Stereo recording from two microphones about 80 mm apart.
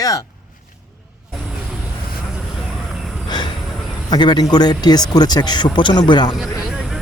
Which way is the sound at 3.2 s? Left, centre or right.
Left.